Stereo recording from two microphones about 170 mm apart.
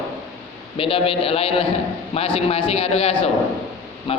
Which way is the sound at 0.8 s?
30° left (ahead or behind).